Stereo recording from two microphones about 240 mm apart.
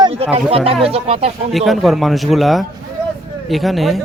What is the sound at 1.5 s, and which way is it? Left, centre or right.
Speech, centre.